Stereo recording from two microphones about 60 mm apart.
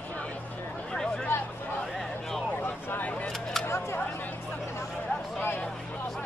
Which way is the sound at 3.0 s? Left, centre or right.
Left.